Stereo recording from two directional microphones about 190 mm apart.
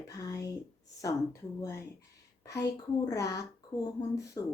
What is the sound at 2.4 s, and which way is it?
Speech, 15° left (ahead or behind).